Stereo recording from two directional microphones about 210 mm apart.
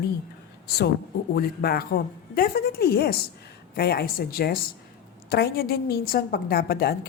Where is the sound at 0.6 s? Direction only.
50° left (ahead or behind).